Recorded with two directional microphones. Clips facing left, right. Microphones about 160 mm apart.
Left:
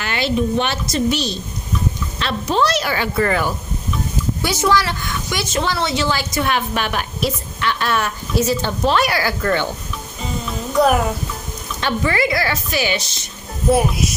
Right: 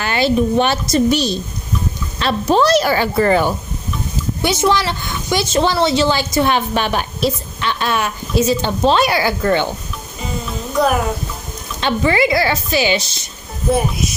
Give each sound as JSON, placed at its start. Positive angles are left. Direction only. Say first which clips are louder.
{"t": 0.0, "sound": "a woman's voice", "louder": "right 4 dB", "side_deg": -35}
{"t": 11.8, "sound": "speech", "louder": "right 4 dB", "side_deg": -25}
{"t": 13.7, "sound": "speech", "louder": "left 1 dB", "side_deg": 5}